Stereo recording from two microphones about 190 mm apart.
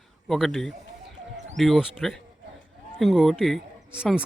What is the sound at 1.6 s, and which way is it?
Speech, centre (ahead or behind).